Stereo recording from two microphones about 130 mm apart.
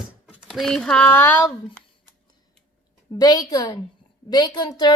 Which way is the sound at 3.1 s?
30° left (ahead or behind).